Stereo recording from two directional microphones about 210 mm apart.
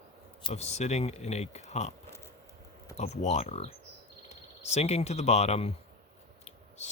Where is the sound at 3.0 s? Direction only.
30° left (ahead or behind).